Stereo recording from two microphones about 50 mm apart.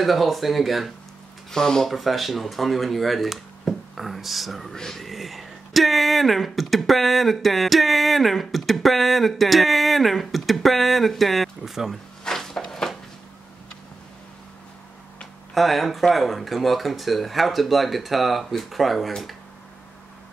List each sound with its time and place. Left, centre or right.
0.0 s speech: centre
1.5 s speech: centre
1.9 s speech: centre
12.3 s a sound: centre
15.5 s speech: centre